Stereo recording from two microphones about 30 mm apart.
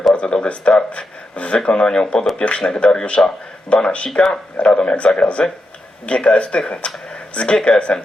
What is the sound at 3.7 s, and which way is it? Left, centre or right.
Speech, left.